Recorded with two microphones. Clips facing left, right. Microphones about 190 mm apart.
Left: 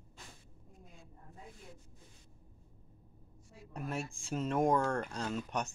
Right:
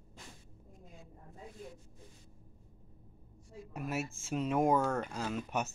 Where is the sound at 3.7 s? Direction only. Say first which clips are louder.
Right 2 dB; 5° right (ahead or behind).